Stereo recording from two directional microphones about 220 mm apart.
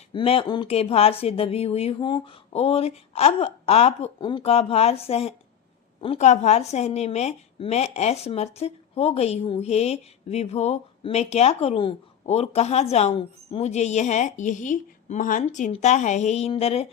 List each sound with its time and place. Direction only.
0.1 s a woman's voice: 25° left (ahead or behind)